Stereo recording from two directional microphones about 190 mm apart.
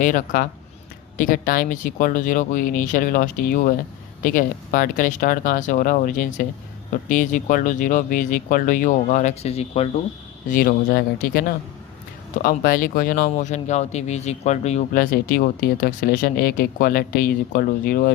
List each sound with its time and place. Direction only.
0.0 s speech: 45° left (ahead or behind)
10.5 s speech: 50° left (ahead or behind)